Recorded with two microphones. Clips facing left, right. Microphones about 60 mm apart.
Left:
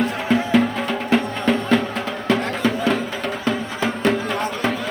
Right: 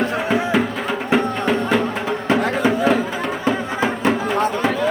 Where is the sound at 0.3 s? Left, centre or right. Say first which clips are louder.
Left 4 dB; centre.